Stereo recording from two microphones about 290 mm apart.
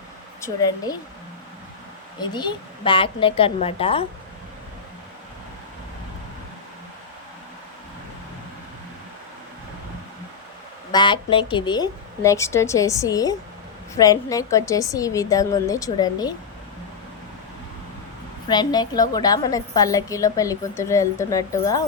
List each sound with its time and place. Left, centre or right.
0.4 s a woman's voice: centre
2.2 s a woman's voice: centre
10.9 s a woman's voice: centre
18.4 s a woman's voice: centre